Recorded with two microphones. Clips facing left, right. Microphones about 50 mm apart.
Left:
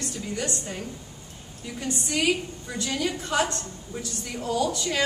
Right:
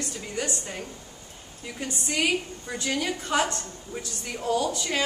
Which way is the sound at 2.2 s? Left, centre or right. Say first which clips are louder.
Even; right.